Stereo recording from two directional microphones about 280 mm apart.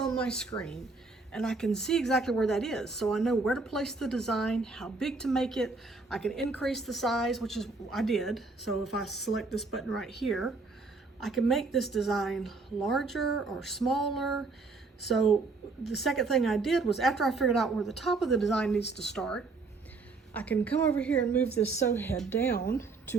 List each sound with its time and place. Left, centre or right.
0.0 s a woman's voice: centre
22.5 s speech: left